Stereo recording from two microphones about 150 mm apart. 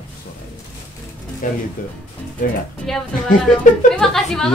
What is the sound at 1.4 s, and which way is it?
Speech, 65° left (ahead or behind).